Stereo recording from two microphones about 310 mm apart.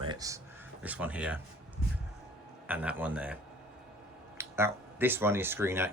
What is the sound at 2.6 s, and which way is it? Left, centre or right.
Speech, centre.